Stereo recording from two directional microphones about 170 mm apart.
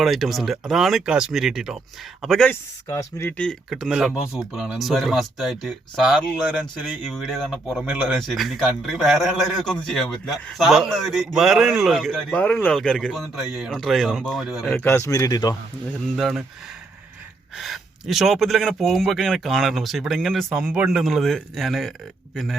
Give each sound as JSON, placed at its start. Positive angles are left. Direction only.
{"t": 0.0, "sound": "speech", "side_deg": 0}
{"t": 2.5, "sound": "speech", "side_deg": 15}
{"t": 14.8, "sound": "speech", "side_deg": 15}
{"t": 16.1, "sound": "speech", "side_deg": 0}
{"t": 17.6, "sound": "speech", "side_deg": 0}